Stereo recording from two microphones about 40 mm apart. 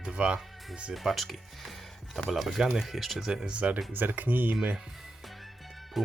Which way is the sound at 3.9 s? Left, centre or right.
Right.